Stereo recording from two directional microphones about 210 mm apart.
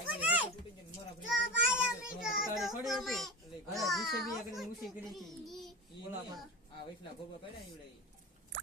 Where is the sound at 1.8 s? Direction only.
Centre (ahead or behind).